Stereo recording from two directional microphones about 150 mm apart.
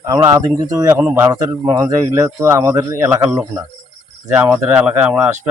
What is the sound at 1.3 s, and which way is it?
A man's voice, 25° right (ahead or behind).